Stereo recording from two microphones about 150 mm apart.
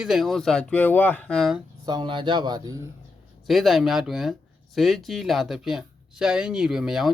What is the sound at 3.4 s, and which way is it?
Speech, centre (ahead or behind).